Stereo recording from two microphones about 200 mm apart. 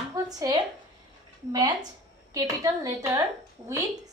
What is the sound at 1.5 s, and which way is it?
A woman's voice, 20° right (ahead or behind).